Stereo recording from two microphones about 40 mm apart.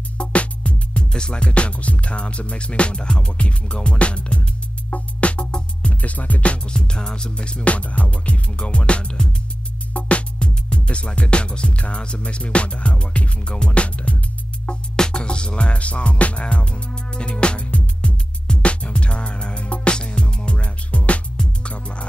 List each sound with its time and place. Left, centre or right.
0.2 s music: left
5.9 s music: left
6.7 s music: left
14.7 s music: left